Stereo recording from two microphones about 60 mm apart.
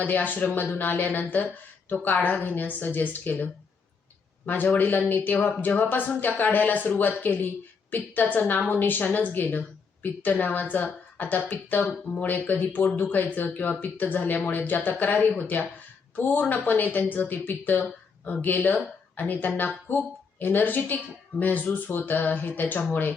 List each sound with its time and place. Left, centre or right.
0.0 s speech: left